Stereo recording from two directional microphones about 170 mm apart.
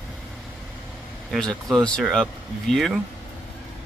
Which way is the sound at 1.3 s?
Centre (ahead or behind).